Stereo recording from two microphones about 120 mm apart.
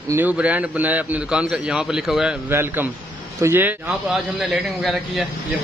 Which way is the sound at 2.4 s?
15° right (ahead or behind).